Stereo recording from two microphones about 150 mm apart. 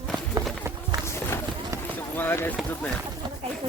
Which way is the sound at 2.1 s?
15° left (ahead or behind).